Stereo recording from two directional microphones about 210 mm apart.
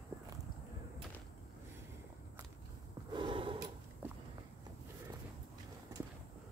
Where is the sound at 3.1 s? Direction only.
25° right (ahead or behind).